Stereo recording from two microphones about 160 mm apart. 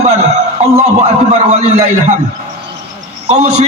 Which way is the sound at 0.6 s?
40° right (ahead or behind).